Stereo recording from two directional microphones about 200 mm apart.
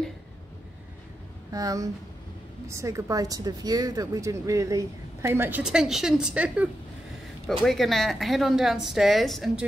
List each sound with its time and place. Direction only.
1.5 s a woman's voice: 15° right (ahead or behind); by 9.7 s centre (ahead or behind)